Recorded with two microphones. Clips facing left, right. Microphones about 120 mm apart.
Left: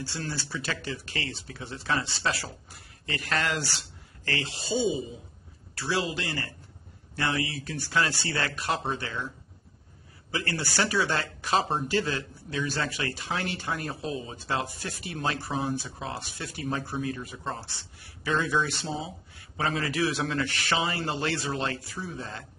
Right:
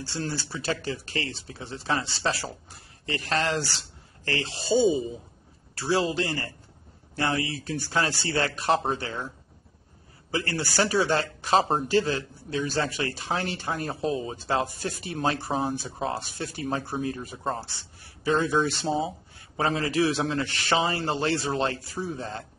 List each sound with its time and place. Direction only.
0.1 s speech: 30° right (ahead or behind)
4.6 s speech: centre (ahead or behind)
5.8 s speech: 35° right (ahead or behind)
10.3 s speech: 35° right (ahead or behind)